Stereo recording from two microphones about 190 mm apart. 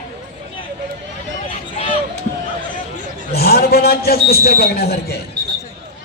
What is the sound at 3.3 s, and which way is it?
A man's voice, 55° left (ahead or behind).